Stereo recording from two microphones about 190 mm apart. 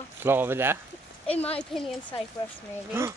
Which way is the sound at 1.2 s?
30° left (ahead or behind).